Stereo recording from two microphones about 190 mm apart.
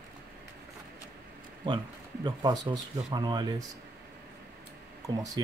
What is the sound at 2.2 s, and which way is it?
Speech, 20° right (ahead or behind).